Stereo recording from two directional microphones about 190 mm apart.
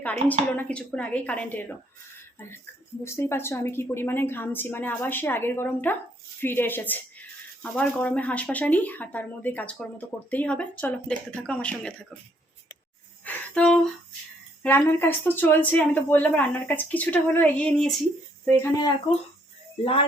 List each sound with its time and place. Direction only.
0.0 s speech: 10° left (ahead or behind)
3.0 s speech: 15° left (ahead or behind)
13.2 s music: 5° left (ahead or behind)
14.6 s speech: 10° left (ahead or behind)
19.8 s speech: 30° left (ahead or behind)